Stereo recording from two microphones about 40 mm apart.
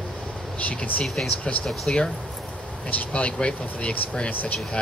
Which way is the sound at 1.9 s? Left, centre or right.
Left.